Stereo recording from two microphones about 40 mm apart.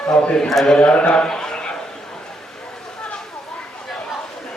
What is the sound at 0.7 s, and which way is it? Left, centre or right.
Speech, left.